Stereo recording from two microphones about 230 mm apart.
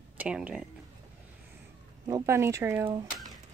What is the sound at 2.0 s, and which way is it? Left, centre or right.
Speech, centre.